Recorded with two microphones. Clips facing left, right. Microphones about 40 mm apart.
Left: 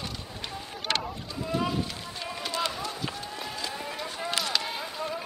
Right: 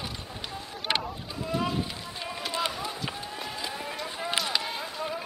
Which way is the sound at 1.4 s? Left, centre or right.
Centre.